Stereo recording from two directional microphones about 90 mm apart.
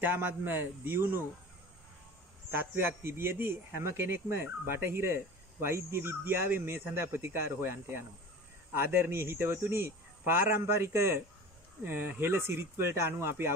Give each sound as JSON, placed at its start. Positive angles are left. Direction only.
{"t": 0.0, "sound": "speech", "side_deg": -20}
{"t": 2.5, "sound": "speech", "side_deg": -25}